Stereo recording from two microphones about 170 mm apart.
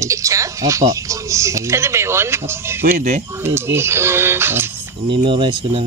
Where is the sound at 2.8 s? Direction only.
50° right (ahead or behind).